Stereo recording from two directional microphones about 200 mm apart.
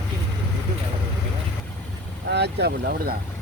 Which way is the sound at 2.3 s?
55° right (ahead or behind).